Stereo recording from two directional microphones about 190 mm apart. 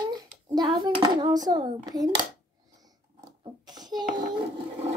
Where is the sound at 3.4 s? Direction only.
20° right (ahead or behind).